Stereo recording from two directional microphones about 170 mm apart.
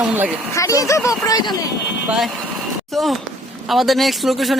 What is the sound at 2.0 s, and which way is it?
A man's voice, centre (ahead or behind).